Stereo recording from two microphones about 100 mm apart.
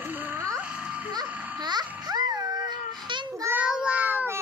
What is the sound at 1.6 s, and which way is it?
Music, 45° right (ahead or behind).